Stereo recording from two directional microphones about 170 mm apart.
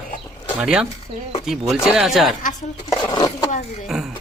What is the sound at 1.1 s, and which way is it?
Speech, 35° right (ahead or behind).